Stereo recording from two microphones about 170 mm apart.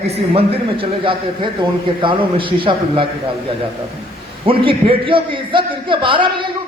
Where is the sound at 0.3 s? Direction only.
35° right (ahead or behind).